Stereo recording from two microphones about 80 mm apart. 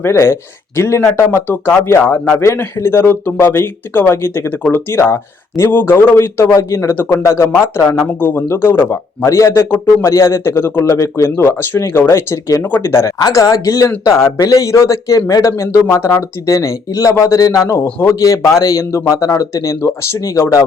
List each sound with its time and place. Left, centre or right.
0.0 s a man's voice: left
10.1 s a man's voice: left
17.6 s a man's voice: left